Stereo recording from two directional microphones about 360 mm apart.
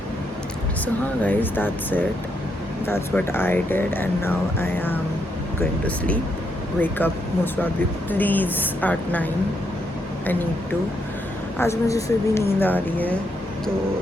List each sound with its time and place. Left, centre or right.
1.2 s speech: centre
11.5 s speech: centre